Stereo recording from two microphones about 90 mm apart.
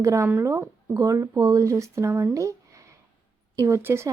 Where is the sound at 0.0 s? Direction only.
35° right (ahead or behind).